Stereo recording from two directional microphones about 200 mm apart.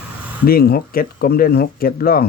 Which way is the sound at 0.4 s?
50° left (ahead or behind).